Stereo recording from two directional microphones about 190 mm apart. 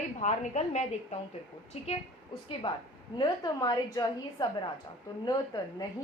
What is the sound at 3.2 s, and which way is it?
A woman's voice, 20° left (ahead or behind).